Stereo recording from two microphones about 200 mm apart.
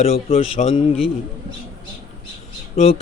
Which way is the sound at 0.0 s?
30° left (ahead or behind).